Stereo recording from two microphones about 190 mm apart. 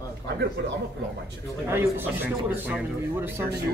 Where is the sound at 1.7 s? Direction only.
10° right (ahead or behind).